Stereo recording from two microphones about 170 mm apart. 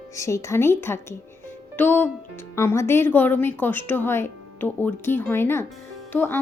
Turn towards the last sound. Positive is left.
turn(degrees=10)  # may be behind; listen again after turning